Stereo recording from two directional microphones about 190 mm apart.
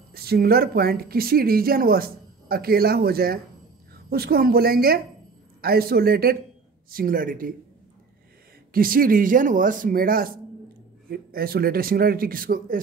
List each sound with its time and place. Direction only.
0.1 s a woman's voice: 55° right (ahead or behind)
8.7 s speech: 50° right (ahead or behind)